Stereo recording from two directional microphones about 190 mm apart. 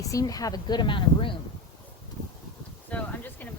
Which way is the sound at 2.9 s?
10° left (ahead or behind).